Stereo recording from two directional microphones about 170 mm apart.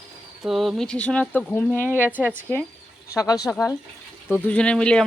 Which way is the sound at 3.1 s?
20° left (ahead or behind).